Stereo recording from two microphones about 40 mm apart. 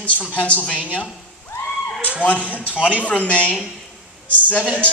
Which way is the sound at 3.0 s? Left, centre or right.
Left.